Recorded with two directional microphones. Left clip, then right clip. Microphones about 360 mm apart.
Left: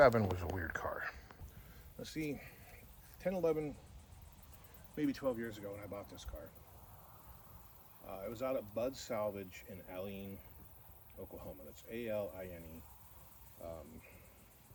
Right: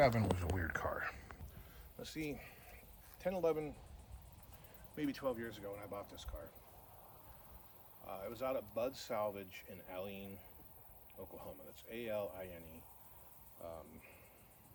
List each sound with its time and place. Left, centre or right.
0.1 s speech: left
0.3 s speech: centre
2.0 s speech: centre
4.9 s speech: centre
8.0 s speech: centre
11.3 s speech: centre